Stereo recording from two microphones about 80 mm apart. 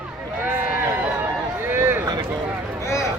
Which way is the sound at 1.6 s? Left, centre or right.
Right.